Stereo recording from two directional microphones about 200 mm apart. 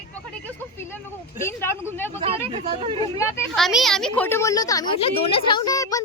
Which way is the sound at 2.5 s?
30° right (ahead or behind).